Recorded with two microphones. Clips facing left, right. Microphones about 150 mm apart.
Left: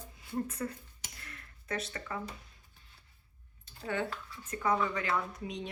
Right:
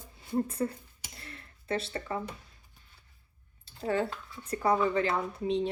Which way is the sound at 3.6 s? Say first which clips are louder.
Right 5 dB; 35° right (ahead or behind).